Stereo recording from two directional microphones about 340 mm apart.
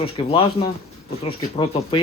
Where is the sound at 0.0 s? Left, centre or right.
Centre.